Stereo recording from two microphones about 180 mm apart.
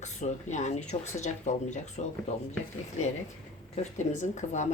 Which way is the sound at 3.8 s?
40° left (ahead or behind).